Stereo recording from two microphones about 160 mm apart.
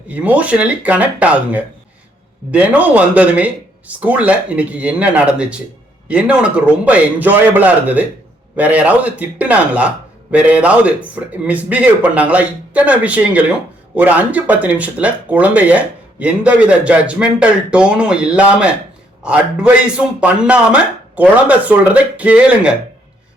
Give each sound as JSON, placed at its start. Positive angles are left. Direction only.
{"t": 0.1, "sound": "a man's voice", "side_deg": -10}